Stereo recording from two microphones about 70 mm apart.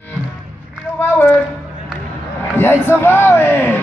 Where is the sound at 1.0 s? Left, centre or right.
Left.